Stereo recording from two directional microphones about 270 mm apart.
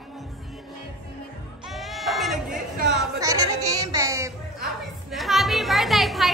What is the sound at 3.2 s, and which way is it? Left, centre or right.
Music, centre.